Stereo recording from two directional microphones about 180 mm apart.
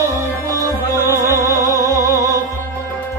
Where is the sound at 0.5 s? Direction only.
15° right (ahead or behind).